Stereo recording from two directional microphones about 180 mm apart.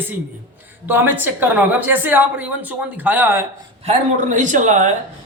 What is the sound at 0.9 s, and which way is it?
A man's voice, 10° right (ahead or behind).